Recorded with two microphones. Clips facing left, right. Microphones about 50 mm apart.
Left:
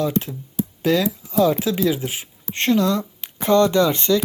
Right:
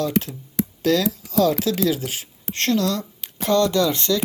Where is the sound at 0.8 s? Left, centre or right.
Centre.